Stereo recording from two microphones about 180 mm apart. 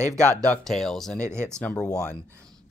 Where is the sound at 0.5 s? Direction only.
Centre (ahead or behind).